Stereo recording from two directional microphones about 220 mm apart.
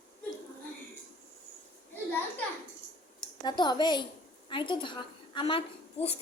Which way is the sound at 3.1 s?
20° left (ahead or behind).